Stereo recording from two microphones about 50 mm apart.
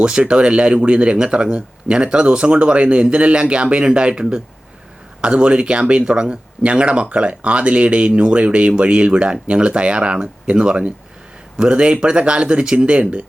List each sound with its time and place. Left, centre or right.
0.2 s speech: right